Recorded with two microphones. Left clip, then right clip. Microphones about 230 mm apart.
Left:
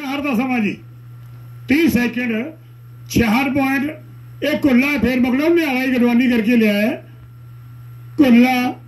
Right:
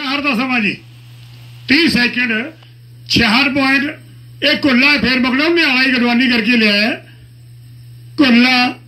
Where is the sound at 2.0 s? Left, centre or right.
Centre.